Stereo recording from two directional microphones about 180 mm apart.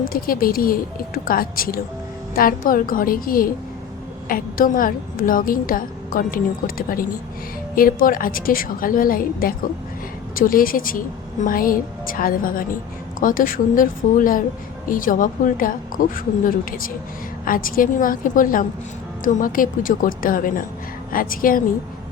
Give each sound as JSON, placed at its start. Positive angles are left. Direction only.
{"t": 0.0, "sound": "a woman's voice", "side_deg": 55}